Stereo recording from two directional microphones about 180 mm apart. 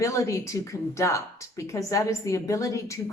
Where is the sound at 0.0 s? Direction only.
15° left (ahead or behind).